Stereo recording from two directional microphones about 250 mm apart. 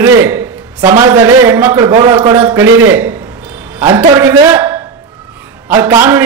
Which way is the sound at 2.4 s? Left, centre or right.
Centre.